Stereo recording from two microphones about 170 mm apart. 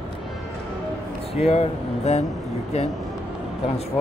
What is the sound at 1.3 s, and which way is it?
Speech, 40° left (ahead or behind).